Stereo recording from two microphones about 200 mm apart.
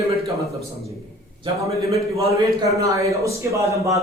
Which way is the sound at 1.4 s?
15° right (ahead or behind).